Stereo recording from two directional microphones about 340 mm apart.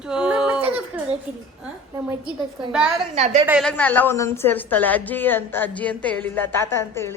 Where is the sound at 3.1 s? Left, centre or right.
Centre.